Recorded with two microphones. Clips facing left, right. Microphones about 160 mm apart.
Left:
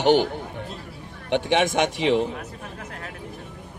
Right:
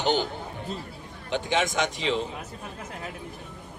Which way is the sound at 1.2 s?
65° left (ahead or behind).